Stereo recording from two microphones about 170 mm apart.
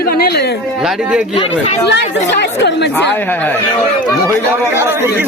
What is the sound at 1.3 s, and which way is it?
Speech, 35° left (ahead or behind).